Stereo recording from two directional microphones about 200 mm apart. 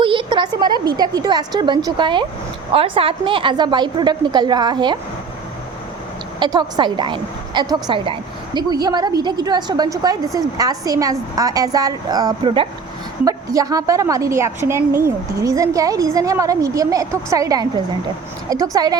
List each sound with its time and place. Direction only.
0.0 s a woman's voice: 25° right (ahead or behind)
6.4 s a woman's voice: 20° right (ahead or behind)